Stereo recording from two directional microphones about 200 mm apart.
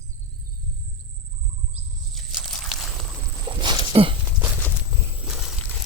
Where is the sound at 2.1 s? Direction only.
Centre (ahead or behind).